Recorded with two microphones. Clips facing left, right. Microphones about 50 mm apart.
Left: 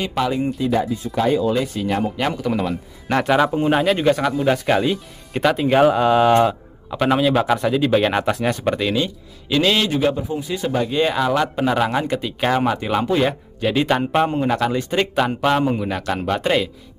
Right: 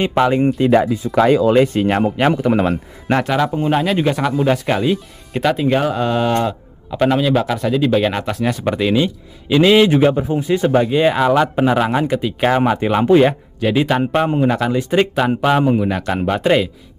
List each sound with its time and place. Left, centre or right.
0.0 s a man's voice: right
0.6 s speech: right
1.1 s speech: right
1.5 s speech: right
2.2 s a man's voice: right
3.2 s a man's voice: centre
9.8 s a man's voice: right
10.1 s a man's voice: right
10.8 s a man's voice: centre
13.6 s a man's voice: centre